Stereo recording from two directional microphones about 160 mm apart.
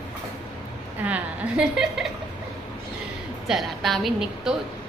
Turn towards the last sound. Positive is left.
turn(degrees=-5)  # may be behind; listen again after turning